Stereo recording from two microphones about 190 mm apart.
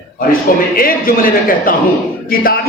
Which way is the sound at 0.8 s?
50° left (ahead or behind).